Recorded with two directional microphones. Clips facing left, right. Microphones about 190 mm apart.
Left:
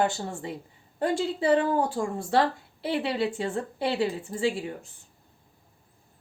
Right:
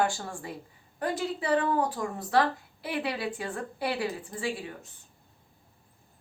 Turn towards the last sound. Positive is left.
turn(degrees=25)  # may be behind; listen again after turning